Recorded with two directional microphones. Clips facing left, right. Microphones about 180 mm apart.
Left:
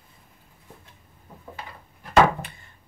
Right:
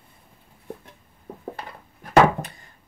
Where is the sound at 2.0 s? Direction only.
40° right (ahead or behind).